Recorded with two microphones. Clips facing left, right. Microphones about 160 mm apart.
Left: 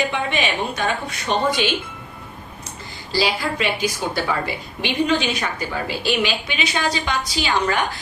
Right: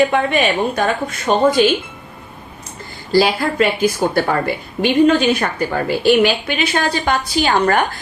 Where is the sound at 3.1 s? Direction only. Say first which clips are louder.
Right 7 dB; 50° right (ahead or behind).